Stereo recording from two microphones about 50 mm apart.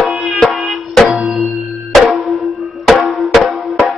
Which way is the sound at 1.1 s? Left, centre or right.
Centre.